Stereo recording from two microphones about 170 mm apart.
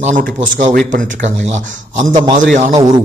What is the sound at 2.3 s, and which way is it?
Speech, 40° right (ahead or behind).